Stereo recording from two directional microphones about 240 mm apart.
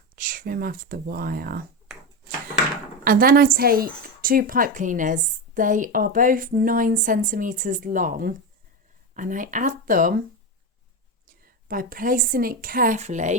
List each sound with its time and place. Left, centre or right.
0.2 s a woman's voice: right
3.0 s a woman's voice: right
11.7 s a woman's voice: right